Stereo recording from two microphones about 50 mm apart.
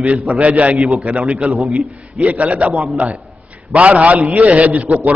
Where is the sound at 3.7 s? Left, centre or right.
Right.